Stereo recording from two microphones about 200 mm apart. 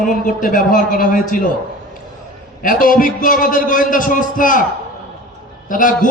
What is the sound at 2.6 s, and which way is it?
A man's voice, 45° left (ahead or behind).